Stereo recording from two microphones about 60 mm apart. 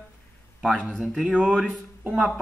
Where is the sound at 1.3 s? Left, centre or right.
Centre.